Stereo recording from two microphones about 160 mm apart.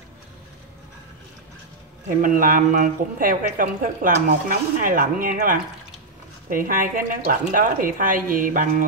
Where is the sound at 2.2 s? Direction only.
60° right (ahead or behind).